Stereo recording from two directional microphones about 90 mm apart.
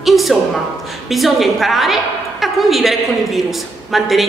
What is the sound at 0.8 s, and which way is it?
A woman's voice, centre (ahead or behind).